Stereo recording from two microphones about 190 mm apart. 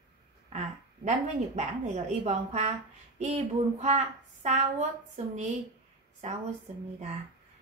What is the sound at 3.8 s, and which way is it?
A woman's voice, 35° right (ahead or behind).